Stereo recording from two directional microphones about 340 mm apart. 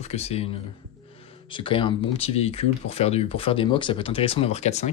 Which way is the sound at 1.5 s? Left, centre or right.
Centre.